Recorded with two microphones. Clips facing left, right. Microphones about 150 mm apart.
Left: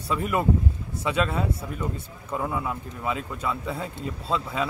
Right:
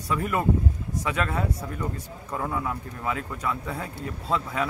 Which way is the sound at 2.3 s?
5° left (ahead or behind).